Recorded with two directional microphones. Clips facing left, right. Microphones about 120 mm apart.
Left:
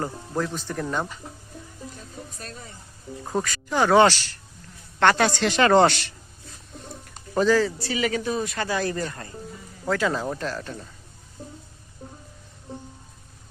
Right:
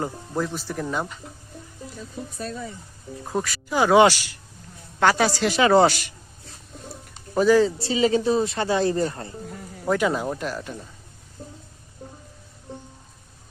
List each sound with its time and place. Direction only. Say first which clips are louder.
0.0 s a woman's voice: right 1 dB; 10° right (ahead or behind)
3.2 s a woman's voice: even; 5° right (ahead or behind)
7.3 s speech: right 3 dB; 15° right (ahead or behind)
9.5 s music: right 4 dB; 65° right (ahead or behind)
9.8 s a woman's voice: right 2 dB; 15° right (ahead or behind)
11.4 s a sound: even; 5° left (ahead or behind)